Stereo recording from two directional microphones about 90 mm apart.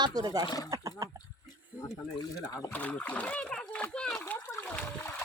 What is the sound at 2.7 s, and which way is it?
A child's voice, 15° left (ahead or behind).